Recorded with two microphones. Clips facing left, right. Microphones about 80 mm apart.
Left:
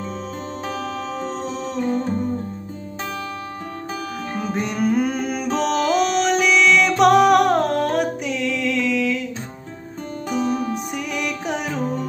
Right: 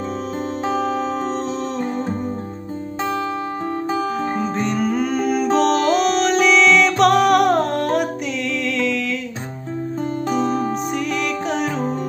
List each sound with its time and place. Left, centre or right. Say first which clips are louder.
0.7 s music: right 8 dB; centre
1.8 s music: left 1 dB; centre
3.9 s music: right 6 dB; right
4.6 s music: left 3 dB; centre
10.3 s music: even; centre